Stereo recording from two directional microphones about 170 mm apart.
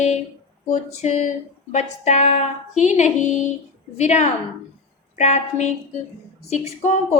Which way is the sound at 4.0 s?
40° left (ahead or behind).